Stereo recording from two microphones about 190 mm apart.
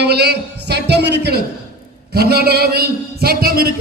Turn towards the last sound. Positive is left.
turn(degrees=-55)  # may be behind; listen again after turning